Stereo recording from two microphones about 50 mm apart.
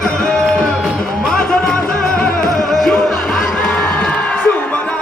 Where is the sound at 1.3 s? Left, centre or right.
Centre.